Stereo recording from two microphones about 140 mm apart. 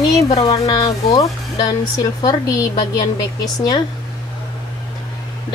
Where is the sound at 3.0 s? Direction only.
30° left (ahead or behind).